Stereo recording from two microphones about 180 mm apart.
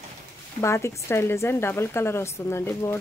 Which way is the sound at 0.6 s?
15° left (ahead or behind).